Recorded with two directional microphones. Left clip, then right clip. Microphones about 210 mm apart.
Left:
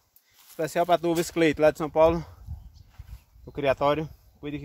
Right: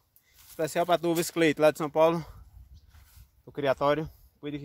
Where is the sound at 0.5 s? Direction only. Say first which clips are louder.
Left 3 dB; 40° right (ahead or behind).